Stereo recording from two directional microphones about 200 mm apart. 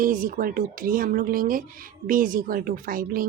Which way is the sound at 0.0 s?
45° right (ahead or behind).